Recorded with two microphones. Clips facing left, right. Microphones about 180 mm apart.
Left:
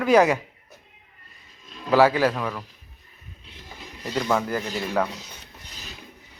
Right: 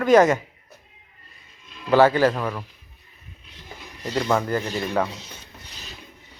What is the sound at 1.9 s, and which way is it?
Speech, centre (ahead or behind).